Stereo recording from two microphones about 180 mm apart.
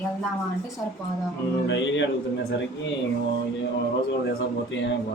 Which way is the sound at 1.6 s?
90° left.